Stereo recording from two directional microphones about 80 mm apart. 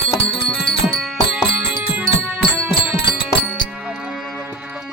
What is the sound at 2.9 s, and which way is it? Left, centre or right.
Music, left.